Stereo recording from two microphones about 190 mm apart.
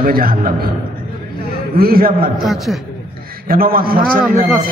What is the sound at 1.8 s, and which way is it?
Speech, 50° right (ahead or behind).